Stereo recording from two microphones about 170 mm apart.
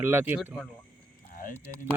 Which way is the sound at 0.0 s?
10° right (ahead or behind).